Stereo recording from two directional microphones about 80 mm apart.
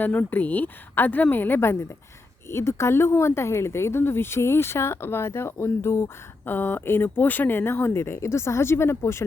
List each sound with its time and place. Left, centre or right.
0.0 s a woman's voice: left